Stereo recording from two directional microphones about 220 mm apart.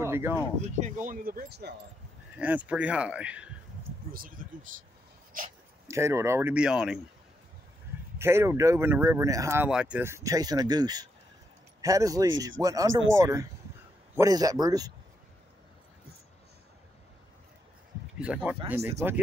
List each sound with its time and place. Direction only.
0.0 s a sound: 10° right (ahead or behind)
0.7 s speech: 35° right (ahead or behind)
2.3 s speech: 5° right (ahead or behind)
4.1 s speech: 40° right (ahead or behind)
5.9 s speech: 15° right (ahead or behind)
8.2 s speech: 10° right (ahead or behind)
18.2 s speech: 5° right (ahead or behind)